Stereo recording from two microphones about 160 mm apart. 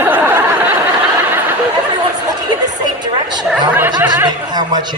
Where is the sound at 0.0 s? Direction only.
10° right (ahead or behind).